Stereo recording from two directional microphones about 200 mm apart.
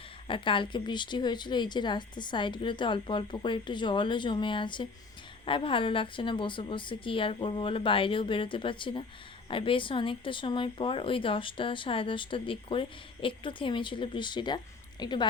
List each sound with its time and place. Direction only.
0.3 s speech: 25° left (ahead or behind)